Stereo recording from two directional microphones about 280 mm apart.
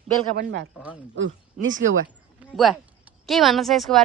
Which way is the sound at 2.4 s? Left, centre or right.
Centre.